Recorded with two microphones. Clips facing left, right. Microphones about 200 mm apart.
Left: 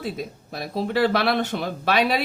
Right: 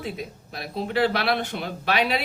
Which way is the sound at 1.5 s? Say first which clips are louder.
Left 4 dB; 55° left (ahead or behind).